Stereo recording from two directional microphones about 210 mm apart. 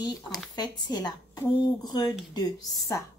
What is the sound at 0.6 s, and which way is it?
A woman's voice, 20° left (ahead or behind).